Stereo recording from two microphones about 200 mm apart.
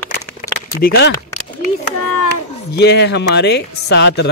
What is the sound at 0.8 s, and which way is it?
Speech, 50° left (ahead or behind).